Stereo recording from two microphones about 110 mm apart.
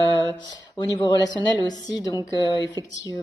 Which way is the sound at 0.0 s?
40° left (ahead or behind).